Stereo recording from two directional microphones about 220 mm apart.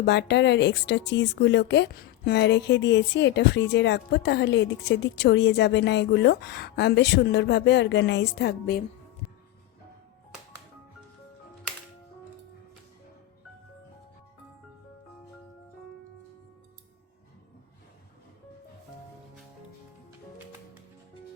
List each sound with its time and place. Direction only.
0.0 s speech: 50° left (ahead or behind)